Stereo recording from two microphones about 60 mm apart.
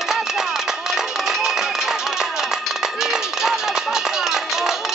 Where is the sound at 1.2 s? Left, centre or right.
Centre.